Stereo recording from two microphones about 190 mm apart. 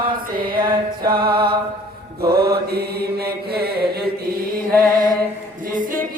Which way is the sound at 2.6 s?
55° right (ahead or behind).